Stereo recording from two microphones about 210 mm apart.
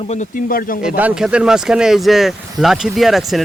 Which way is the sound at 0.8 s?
5° right (ahead or behind).